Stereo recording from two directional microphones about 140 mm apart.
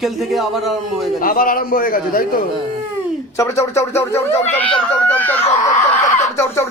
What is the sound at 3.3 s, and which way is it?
Speech, 20° left (ahead or behind).